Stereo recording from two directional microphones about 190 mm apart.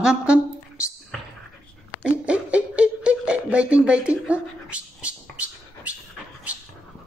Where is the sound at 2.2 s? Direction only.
5° right (ahead or behind).